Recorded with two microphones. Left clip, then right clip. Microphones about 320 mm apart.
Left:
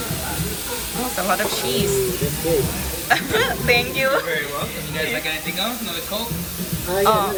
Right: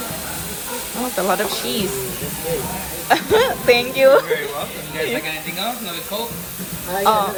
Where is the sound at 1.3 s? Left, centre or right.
Centre.